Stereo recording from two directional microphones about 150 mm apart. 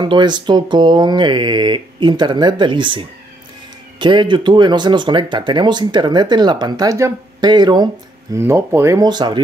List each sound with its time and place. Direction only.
0.0 s speech: 30° right (ahead or behind)
8.4 s speech: 15° right (ahead or behind)